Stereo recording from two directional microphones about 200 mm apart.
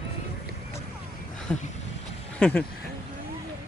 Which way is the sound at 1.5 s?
10° left (ahead or behind).